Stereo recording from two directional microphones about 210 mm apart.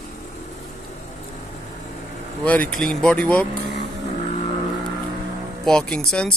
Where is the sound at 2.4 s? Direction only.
5° left (ahead or behind).